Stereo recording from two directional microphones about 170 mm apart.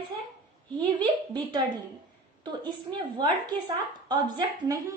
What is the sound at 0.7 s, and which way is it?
Speech, 25° right (ahead or behind).